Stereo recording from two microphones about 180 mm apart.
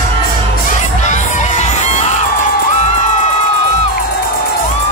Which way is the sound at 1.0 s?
40° left (ahead or behind).